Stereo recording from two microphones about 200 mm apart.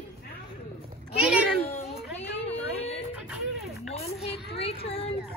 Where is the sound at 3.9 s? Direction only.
30° left (ahead or behind).